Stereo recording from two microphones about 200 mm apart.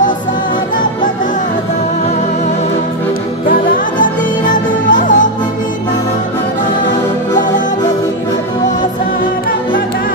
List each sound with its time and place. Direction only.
3.4 s music: 45° left (ahead or behind)